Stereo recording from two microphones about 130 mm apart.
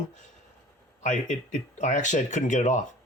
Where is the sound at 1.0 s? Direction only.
70° left (ahead or behind).